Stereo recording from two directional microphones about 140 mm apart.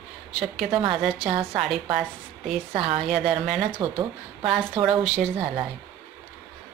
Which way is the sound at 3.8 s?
30° right (ahead or behind).